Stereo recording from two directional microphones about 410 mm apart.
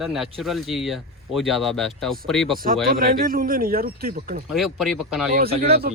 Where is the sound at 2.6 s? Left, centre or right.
Right.